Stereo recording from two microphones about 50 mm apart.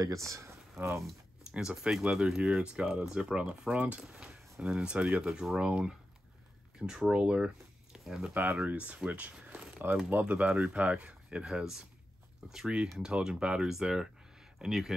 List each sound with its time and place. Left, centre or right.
0.1 s speech: right
1.6 s speech: centre; by 4.0 s right
4.0 s speech: centre
8.6 s speech: right
11.4 s speech: centre
13.0 s speech: centre